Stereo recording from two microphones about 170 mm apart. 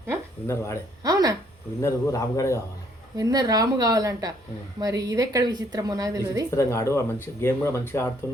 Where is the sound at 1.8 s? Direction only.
20° left (ahead or behind).